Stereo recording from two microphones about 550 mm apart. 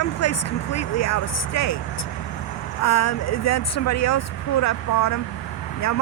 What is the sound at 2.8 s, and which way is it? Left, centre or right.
Speech, left.